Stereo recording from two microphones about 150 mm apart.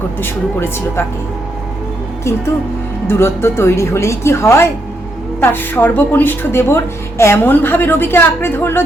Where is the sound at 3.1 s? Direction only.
15° left (ahead or behind).